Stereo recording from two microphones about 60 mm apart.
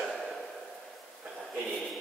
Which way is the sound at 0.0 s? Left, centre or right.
Centre.